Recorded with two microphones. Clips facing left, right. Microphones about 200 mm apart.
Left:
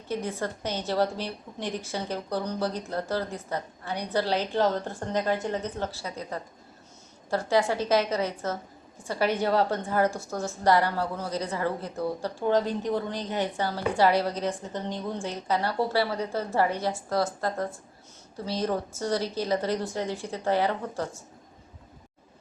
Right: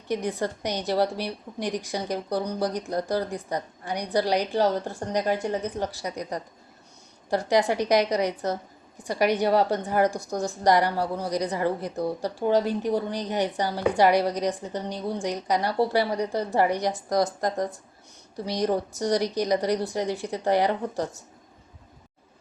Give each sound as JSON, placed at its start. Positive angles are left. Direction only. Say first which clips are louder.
{"t": 0.1, "sound": "a woman's voice", "louder": "right 3 dB", "side_deg": -15}